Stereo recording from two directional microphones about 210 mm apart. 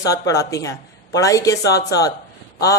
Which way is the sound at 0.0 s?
15° left (ahead or behind).